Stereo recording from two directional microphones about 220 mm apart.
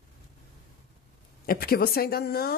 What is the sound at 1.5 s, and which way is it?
Speech, 45° left (ahead or behind).